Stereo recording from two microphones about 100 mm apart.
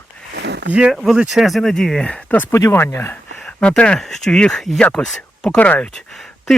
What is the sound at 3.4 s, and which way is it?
Speech, 10° left (ahead or behind).